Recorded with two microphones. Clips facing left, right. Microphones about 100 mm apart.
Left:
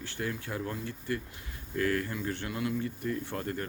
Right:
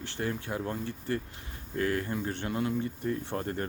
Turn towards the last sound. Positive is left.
turn(degrees=-30)  # may be behind; listen again after turning